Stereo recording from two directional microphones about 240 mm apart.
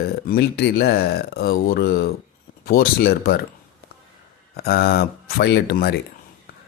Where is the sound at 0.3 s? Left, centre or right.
Left.